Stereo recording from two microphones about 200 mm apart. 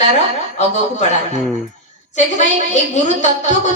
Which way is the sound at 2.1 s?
35° left (ahead or behind).